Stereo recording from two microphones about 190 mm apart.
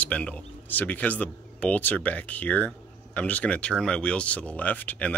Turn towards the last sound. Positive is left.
turn(degrees=10)  # may be behind; listen again after turning